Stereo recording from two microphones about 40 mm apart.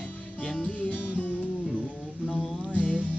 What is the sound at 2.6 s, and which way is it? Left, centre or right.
Music, right.